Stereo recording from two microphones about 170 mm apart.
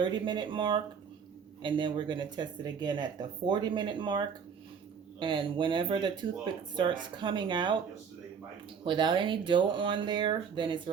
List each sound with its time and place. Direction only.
0.0 s speech: 25° right (ahead or behind)
8.8 s speech: 30° right (ahead or behind)